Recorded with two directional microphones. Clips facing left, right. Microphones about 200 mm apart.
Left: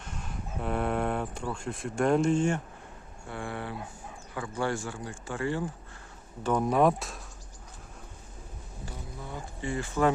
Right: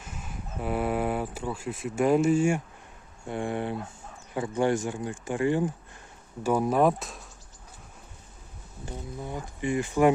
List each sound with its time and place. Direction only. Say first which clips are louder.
0.0 s speech: even; 5° right (ahead or behind)
3.2 s speech: right 6 dB; 20° right (ahead or behind)
6.4 s speech: right 1 dB; 5° right (ahead or behind)
8.9 s speech: right 6 dB; 15° right (ahead or behind)